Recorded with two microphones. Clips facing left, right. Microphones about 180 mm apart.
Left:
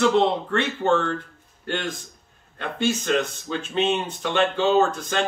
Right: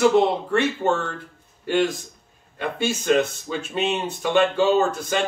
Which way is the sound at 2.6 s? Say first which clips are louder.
Even; 10° right (ahead or behind).